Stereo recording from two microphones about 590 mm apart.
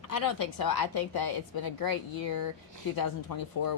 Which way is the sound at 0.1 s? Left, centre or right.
Left.